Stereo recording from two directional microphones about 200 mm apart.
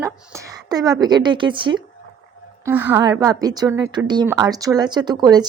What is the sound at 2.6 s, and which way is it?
A woman's voice, 10° right (ahead or behind).